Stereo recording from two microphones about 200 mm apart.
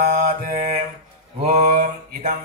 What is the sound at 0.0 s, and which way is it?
Mantra, 35° right (ahead or behind).